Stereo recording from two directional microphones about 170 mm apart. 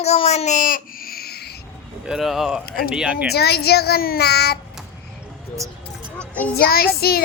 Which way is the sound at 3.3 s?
70° left (ahead or behind).